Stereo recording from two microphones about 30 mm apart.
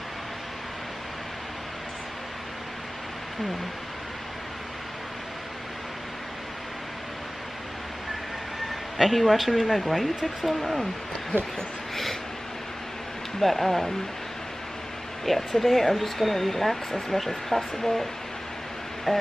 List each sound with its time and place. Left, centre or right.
8.9 s speech: centre
11.3 s speech: left
11.9 s a sound: centre
13.4 s speech: centre
15.2 s speech: centre
19.1 s speech: centre